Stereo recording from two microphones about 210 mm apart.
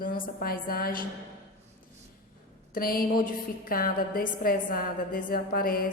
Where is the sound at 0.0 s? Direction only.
40° left (ahead or behind).